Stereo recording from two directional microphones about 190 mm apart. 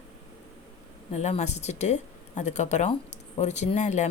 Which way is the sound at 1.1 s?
35° left (ahead or behind).